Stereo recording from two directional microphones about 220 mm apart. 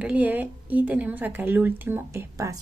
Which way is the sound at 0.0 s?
5° right (ahead or behind).